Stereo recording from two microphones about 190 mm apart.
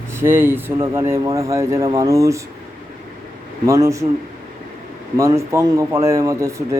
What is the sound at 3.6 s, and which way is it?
Speech, 15° right (ahead or behind).